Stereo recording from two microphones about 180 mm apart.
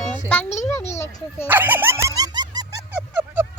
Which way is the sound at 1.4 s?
10° right (ahead or behind).